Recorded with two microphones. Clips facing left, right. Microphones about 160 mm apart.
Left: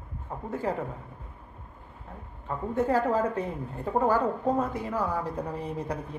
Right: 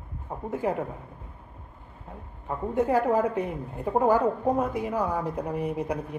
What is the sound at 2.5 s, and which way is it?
A woman's voice, 15° right (ahead or behind).